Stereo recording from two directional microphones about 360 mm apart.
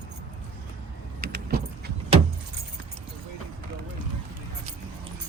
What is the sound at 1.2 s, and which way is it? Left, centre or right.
Vehicle, right.